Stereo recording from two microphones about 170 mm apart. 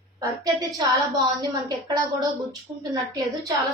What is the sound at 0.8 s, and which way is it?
A woman's voice, 20° right (ahead or behind).